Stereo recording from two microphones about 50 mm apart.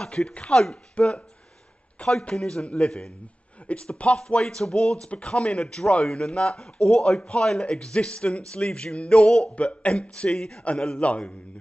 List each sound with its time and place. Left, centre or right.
0.0 s speech: centre
0.9 s speech: left
9.6 s speech: left
11.0 s speech: left